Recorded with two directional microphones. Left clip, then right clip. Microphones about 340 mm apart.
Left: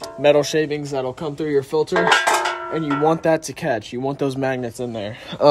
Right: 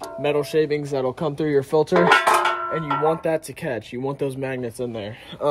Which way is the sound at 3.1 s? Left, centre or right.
Centre.